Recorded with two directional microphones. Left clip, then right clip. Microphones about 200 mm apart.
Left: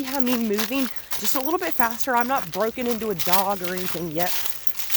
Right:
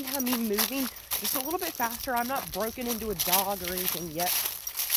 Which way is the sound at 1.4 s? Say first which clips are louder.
Left 9 dB; 40° left (ahead or behind).